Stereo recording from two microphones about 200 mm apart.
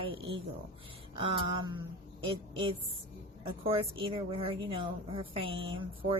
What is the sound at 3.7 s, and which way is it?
A woman's voice, 25° right (ahead or behind).